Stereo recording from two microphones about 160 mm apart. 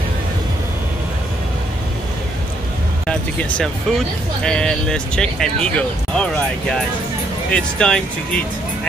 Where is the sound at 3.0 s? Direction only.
5° left (ahead or behind).